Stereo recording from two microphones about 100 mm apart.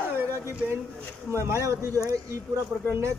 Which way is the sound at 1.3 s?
30° right (ahead or behind).